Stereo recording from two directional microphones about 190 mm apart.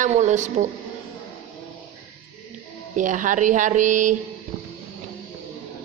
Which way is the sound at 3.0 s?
40° right (ahead or behind).